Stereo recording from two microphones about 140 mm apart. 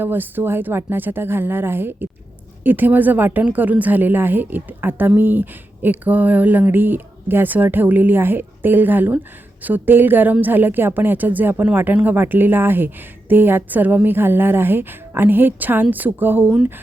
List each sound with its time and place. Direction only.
0.0 s a woman's voice: 15° right (ahead or behind)